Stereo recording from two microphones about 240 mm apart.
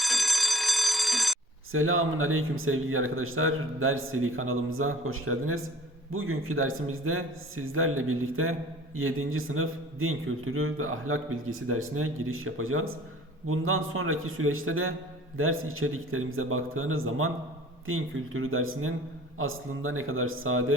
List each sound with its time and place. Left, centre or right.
0.0 s alarm: centre
1.7 s a man's voice: right